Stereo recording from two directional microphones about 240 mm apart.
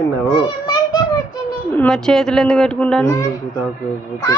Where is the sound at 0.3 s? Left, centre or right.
Centre.